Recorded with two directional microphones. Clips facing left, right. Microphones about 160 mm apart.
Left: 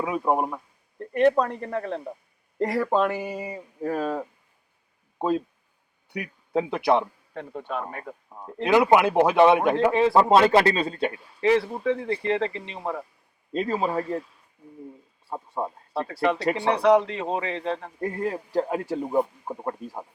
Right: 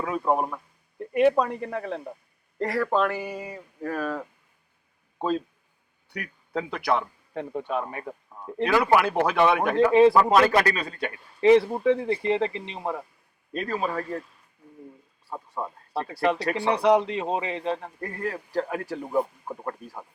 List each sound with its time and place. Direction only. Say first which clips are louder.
0.0 s speech: left 1 dB; 15° left (ahead or behind)
0.9 s a sound: even; 10° right (ahead or behind)
1.4 s speech: left 1 dB; 5° right (ahead or behind)
2.6 s a man's voice: left 1 dB; 20° left (ahead or behind)
7.3 s a man's voice: right 3 dB; 15° right (ahead or behind)
8.6 s speech: left 3 dB; 20° left (ahead or behind)
11.3 s a man's voice: right 4 dB; 15° right (ahead or behind)
13.5 s speech: left 3 dB; 25° left (ahead or behind)
14.0 s speech: left 3 dB; 5° left (ahead or behind)
15.3 s speech: left 3 dB; 25° left (ahead or behind)
15.9 s a man's voice: even; 15° right (ahead or behind)
16.4 s speech: left 2 dB; 25° left (ahead or behind)
16.7 s a man's voice: left 1 dB; 15° right (ahead or behind)
18.0 s speech: left 4 dB; 20° left (ahead or behind)